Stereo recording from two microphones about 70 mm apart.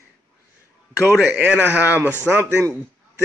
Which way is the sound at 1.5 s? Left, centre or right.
Centre.